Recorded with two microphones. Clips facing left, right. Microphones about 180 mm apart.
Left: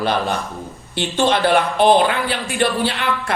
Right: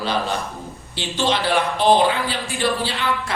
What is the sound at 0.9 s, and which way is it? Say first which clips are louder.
Speech: left 4 dB; 55° left (ahead or behind).